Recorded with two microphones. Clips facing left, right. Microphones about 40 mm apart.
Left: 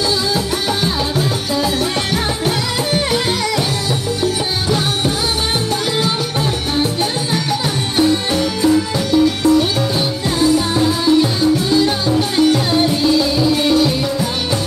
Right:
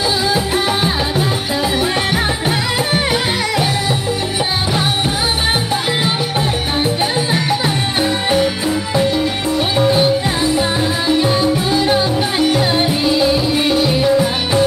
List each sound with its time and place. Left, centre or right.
8.0 s music: centre
11.7 s music: right